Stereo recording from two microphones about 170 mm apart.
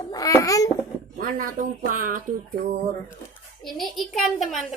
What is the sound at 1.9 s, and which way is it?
Speech, 50° right (ahead or behind).